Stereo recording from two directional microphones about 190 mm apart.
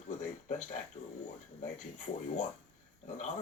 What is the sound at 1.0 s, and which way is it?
Speech, 40° left (ahead or behind).